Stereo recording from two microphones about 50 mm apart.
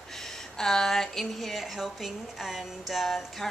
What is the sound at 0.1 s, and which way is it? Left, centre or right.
A woman's voice, centre.